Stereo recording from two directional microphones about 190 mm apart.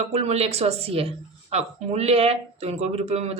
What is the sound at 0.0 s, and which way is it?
Speech, 35° right (ahead or behind).